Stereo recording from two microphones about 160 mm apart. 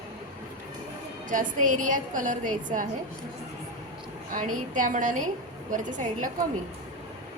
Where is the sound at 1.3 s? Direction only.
55° right (ahead or behind).